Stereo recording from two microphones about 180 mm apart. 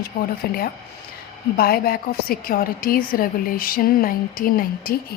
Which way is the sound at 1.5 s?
55° left (ahead or behind).